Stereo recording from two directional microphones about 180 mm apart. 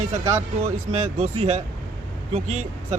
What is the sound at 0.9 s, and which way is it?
Speech, 40° right (ahead or behind).